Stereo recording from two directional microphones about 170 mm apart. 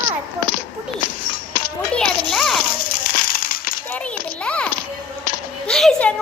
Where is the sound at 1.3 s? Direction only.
60° left (ahead or behind).